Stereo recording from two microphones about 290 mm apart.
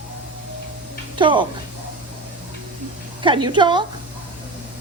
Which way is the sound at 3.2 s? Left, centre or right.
Centre.